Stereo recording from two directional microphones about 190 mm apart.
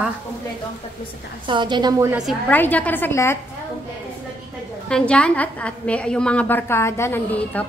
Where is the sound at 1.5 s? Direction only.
25° right (ahead or behind).